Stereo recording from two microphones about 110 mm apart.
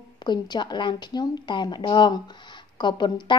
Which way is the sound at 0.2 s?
40° left (ahead or behind).